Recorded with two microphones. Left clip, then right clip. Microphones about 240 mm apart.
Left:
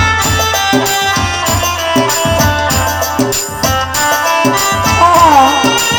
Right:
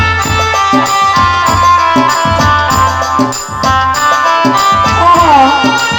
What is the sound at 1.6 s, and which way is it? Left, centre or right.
Music, left.